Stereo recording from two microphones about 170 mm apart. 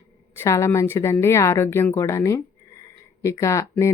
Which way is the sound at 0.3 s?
15° left (ahead or behind).